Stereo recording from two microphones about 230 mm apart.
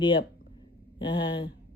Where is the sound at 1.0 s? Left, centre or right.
Left.